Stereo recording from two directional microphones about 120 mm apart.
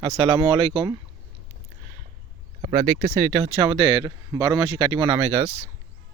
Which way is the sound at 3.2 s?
45° right (ahead or behind).